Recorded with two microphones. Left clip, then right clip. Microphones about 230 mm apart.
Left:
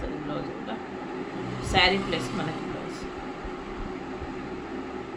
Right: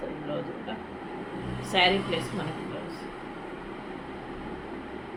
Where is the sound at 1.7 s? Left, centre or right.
Centre.